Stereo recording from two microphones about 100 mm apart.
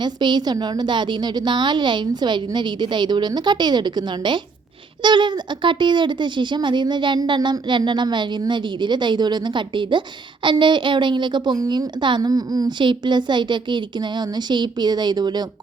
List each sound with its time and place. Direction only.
0.0 s speech: 50° right (ahead or behind)
11.9 s speech: 50° right (ahead or behind)